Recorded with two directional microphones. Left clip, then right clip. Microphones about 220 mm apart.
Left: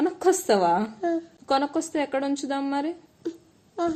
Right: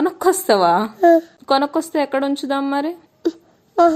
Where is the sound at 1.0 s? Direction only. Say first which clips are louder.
Right 15 dB; 45° right (ahead or behind).